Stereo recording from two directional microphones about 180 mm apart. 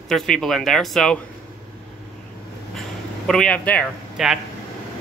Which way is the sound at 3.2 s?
5° left (ahead or behind).